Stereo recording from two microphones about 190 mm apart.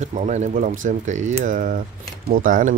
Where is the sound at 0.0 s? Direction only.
40° right (ahead or behind).